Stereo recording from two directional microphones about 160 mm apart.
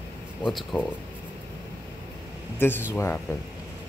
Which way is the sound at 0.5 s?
Centre (ahead or behind).